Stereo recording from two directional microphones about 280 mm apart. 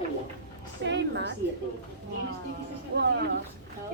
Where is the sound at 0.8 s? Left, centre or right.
Right.